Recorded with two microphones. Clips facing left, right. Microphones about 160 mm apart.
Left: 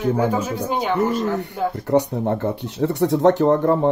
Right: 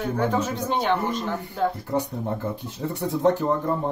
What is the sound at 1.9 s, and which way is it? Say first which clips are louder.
Speech: left 8 dB; 75° left (ahead or behind).